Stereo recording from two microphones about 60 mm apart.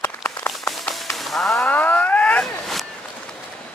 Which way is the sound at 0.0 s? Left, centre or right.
Left.